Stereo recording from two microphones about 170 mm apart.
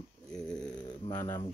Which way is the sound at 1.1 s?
20° left (ahead or behind).